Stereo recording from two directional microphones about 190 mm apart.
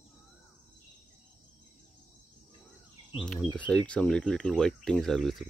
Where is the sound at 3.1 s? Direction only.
Centre (ahead or behind).